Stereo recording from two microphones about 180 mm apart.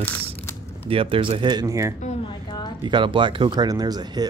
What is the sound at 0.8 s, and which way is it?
Speech, 30° right (ahead or behind).